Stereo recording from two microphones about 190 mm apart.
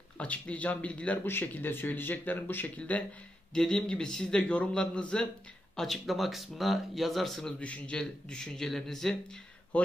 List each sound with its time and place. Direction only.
0.2 s speech: 5° left (ahead or behind)